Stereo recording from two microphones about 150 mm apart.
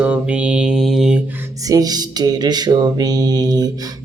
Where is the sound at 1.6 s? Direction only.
25° right (ahead or behind).